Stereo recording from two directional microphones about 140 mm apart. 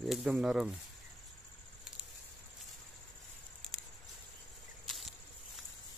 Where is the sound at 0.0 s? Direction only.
Centre (ahead or behind).